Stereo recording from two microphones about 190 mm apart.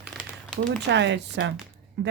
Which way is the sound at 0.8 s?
70° right (ahead or behind).